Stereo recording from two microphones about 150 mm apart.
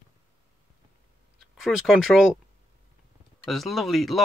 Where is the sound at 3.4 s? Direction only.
Centre (ahead or behind).